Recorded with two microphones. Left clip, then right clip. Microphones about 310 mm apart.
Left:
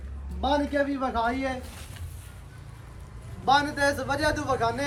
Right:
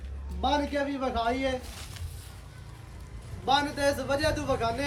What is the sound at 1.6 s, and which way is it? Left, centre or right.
Speech, centre.